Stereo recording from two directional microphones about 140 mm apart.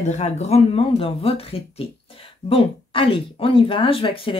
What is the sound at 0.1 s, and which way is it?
Speech, 55° left (ahead or behind).